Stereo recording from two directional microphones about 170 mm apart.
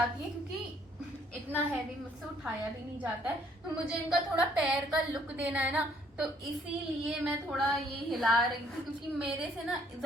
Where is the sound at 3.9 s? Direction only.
5° right (ahead or behind).